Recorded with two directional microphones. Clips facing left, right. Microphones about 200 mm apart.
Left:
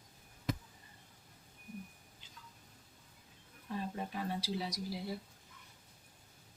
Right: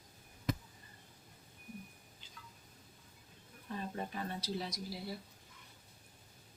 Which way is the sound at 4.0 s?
10° left (ahead or behind).